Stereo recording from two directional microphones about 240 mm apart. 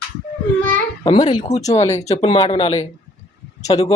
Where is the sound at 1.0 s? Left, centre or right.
Left.